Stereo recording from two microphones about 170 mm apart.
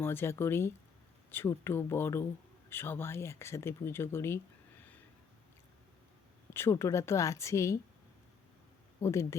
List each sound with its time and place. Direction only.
0.0 s speech: 15° left (ahead or behind)
6.5 s speech: 15° left (ahead or behind)
9.0 s speech: 15° left (ahead or behind)